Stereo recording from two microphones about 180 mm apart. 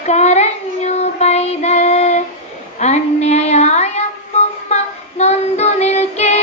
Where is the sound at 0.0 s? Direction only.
40° left (ahead or behind).